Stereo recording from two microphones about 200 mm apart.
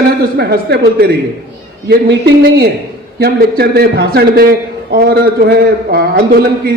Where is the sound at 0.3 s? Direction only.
50° right (ahead or behind).